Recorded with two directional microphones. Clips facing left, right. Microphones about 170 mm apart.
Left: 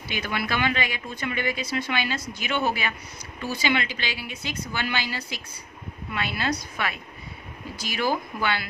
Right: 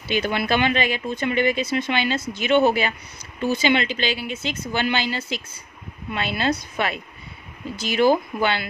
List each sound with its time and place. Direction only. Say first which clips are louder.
0.1 s speech: right 7 dB; 25° right (ahead or behind)